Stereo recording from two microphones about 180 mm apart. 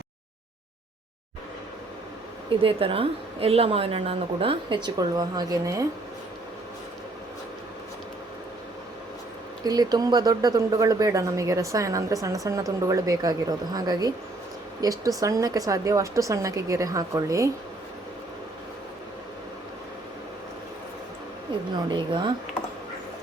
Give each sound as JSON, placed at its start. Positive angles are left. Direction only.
{"t": 2.6, "sound": "a woman's voice", "side_deg": -30}
{"t": 9.6, "sound": "speech", "side_deg": -20}
{"t": 21.8, "sound": "speech", "side_deg": -25}